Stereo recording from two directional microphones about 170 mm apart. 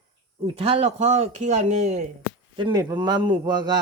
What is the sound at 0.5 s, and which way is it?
Speech, 35° right (ahead or behind).